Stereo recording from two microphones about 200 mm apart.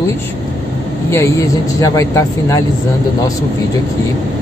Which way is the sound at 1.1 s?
15° left (ahead or behind).